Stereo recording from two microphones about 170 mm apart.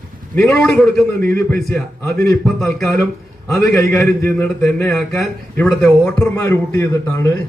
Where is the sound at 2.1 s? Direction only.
20° left (ahead or behind).